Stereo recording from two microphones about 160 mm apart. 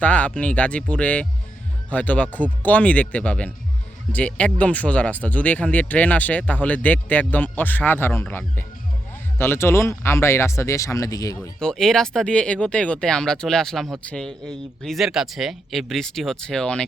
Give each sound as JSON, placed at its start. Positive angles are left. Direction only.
{"t": 0.0, "sound": "speech", "side_deg": 10}
{"t": 11.6, "sound": "speech", "side_deg": 5}